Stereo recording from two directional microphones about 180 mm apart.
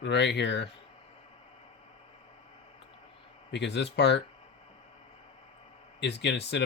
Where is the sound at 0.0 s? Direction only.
70° left (ahead or behind).